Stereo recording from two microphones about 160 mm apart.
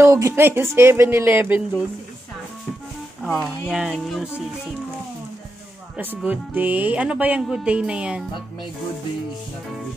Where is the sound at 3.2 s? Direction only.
Centre (ahead or behind).